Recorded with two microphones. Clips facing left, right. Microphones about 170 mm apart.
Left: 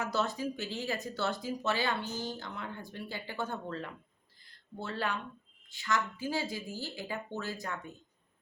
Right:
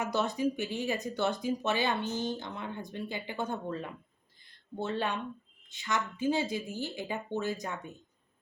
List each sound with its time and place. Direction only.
0.0 s speech: 20° right (ahead or behind)